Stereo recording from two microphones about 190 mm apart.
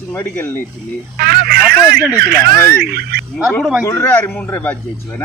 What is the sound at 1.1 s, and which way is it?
Telephone, 55° right (ahead or behind).